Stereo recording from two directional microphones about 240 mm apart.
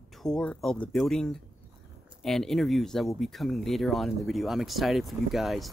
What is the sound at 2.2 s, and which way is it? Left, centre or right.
Speech, centre.